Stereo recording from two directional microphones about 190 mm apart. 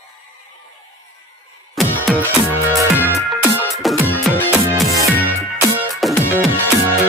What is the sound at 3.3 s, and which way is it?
Music, centre (ahead or behind).